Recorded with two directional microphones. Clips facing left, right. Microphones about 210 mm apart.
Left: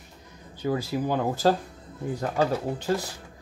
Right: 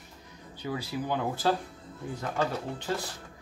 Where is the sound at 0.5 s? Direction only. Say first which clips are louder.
Left 7 dB; 45° left (ahead or behind).